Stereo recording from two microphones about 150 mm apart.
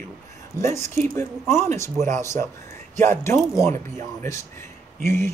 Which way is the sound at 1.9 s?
50° right (ahead or behind).